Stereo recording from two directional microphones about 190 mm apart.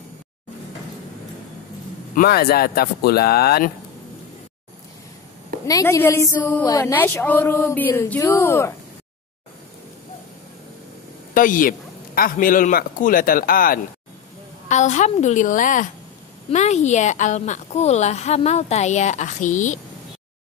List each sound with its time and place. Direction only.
2.1 s speech: 50° left (ahead or behind)
5.7 s a woman's voice: 15° left (ahead or behind)
11.3 s a woman's voice: 45° left (ahead or behind)